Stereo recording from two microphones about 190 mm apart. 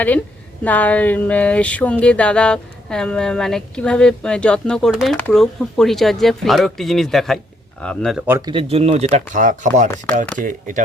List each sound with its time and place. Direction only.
0.6 s speech: 10° left (ahead or behind)
8.3 s speech: 20° right (ahead or behind)
8.7 s speech: 35° right (ahead or behind)